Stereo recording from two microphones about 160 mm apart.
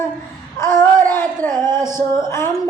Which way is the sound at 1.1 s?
15° left (ahead or behind).